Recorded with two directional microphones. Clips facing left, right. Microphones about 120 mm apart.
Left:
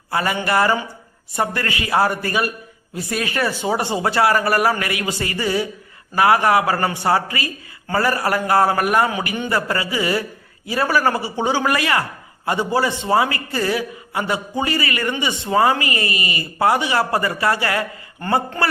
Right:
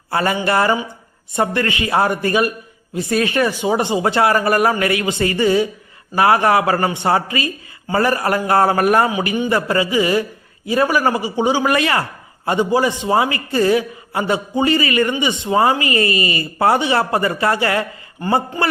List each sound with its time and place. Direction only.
0.1 s a man's voice: 30° right (ahead or behind)
9.1 s a man's voice: 20° right (ahead or behind)